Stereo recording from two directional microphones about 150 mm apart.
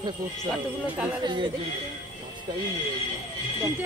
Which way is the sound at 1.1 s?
30° right (ahead or behind).